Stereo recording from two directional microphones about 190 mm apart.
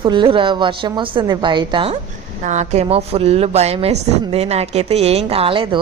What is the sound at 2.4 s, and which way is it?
A woman's voice, 40° right (ahead or behind).